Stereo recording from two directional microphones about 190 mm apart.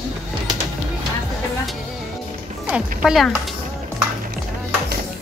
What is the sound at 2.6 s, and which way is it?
Speech, 5° right (ahead or behind).